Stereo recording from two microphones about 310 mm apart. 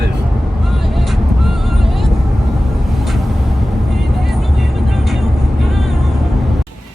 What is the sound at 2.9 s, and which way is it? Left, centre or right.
Vehicle, centre.